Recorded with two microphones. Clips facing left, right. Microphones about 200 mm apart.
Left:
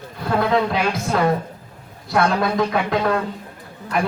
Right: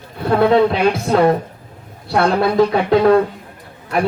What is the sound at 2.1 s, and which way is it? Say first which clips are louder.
Speech: right 4 dB; 30° right (ahead or behind).